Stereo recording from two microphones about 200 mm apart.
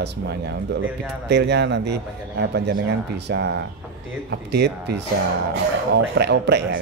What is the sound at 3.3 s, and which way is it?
Speech, 60° right (ahead or behind).